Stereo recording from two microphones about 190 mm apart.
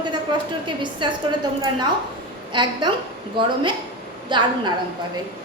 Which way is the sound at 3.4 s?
25° right (ahead or behind).